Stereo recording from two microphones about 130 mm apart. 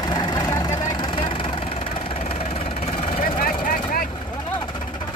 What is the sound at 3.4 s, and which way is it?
Vehicle, 90° left.